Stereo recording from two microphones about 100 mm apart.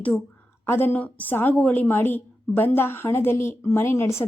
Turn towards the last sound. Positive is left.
turn(degrees=25)  # may be behind; listen again after turning